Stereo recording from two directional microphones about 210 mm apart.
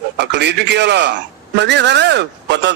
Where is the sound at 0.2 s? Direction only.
55° right (ahead or behind).